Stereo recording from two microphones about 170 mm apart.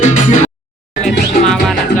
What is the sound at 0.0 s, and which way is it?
Music, 45° left (ahead or behind).